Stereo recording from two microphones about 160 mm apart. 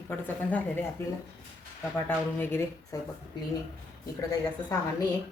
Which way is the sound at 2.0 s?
15° left (ahead or behind).